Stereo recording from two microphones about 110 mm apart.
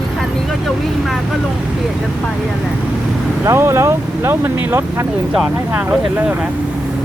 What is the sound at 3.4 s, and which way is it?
Speech, 25° right (ahead or behind).